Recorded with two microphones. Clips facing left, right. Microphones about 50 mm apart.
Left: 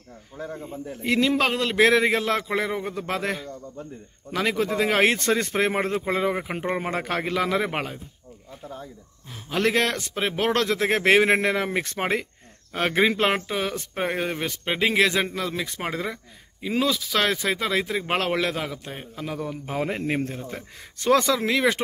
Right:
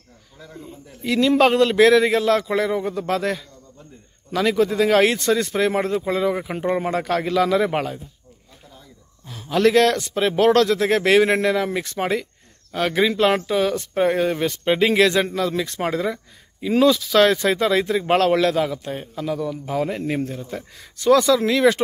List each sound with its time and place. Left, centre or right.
0.4 s a man's voice: left
1.3 s a man's voice: centre
1.8 s speech: left
9.3 s speech: centre
19.2 s speech: left
21.4 s speech: centre